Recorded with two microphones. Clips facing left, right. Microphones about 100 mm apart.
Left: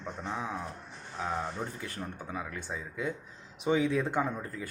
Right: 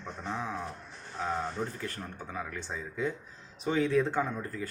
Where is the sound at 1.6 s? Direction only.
5° left (ahead or behind).